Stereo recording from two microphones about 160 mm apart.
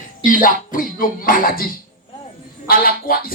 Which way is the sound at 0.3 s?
60° left (ahead or behind).